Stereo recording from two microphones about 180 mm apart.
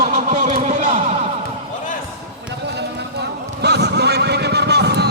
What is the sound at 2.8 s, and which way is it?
Vehicle, 65° right (ahead or behind).